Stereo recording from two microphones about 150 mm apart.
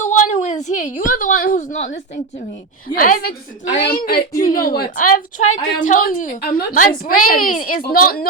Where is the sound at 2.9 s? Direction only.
75° left (ahead or behind).